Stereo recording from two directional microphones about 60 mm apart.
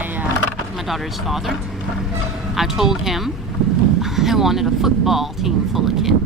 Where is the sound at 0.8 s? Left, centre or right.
Centre.